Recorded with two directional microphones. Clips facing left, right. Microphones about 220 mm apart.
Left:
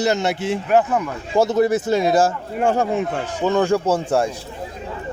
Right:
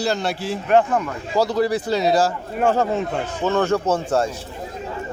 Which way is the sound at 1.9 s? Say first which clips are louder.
Left 1 dB; 50° left (ahead or behind).